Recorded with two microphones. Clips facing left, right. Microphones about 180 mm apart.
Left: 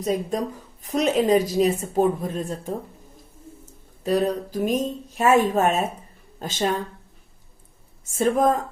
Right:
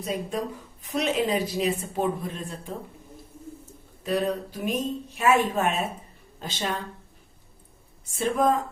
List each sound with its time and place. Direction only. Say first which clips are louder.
0.0 s a woman's voice: left 5 dB; 40° left (ahead or behind)
4.0 s a woman's voice: left 4 dB; 40° left (ahead or behind)
8.0 s speech: left 5 dB; 45° left (ahead or behind)